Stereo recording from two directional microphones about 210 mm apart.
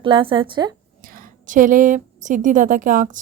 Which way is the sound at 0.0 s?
25° right (ahead or behind).